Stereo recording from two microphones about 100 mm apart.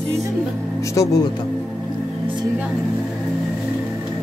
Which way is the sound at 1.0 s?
35° left (ahead or behind).